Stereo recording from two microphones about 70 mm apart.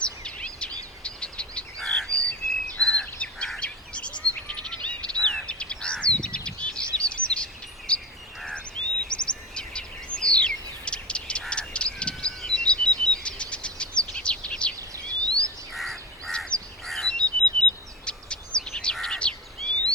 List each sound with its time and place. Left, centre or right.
0.0 s a sound: centre
1.0 s bird: centre
1.8 s bird vocalization: centre
2.9 s bird: centre
4.4 s frog: centre
5.4 s bird: centre
7.0 s bird vocalization: centre
9.0 s a sound: centre
14.8 s a sound: right
15.7 s a sound: centre
16.8 s bird vocalization: centre
18.9 s bird: centre